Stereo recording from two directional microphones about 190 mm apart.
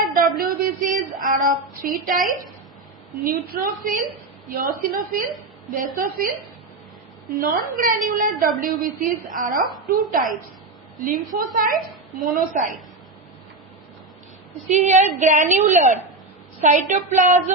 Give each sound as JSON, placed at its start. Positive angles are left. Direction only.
{"t": 0.0, "sound": "a sound", "side_deg": -45}
{"t": 3.2, "sound": "a woman's voice", "side_deg": -45}
{"t": 7.3, "sound": "a woman's voice", "side_deg": -45}
{"t": 14.7, "sound": "a woman's voice", "side_deg": -40}